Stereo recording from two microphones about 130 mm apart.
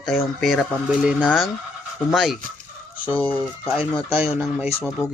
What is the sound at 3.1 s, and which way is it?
Fowl, 10° left (ahead or behind).